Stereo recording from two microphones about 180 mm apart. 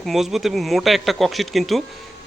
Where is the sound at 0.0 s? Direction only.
Centre (ahead or behind).